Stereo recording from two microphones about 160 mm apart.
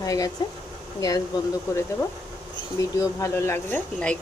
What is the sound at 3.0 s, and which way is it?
Speech, 15° left (ahead or behind).